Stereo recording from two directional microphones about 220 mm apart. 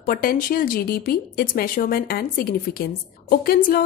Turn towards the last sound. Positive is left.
turn(degrees=40)  # may be behind; listen again after turning